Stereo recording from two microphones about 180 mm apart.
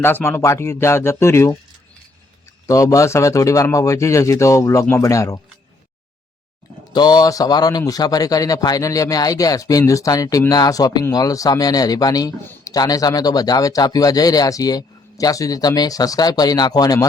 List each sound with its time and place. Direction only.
0.0 s speech: 10° left (ahead or behind)
2.6 s speech: 20° left (ahead or behind)
6.9 s a man's voice: 20° left (ahead or behind)